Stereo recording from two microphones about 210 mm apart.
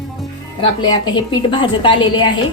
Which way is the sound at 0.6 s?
20° left (ahead or behind).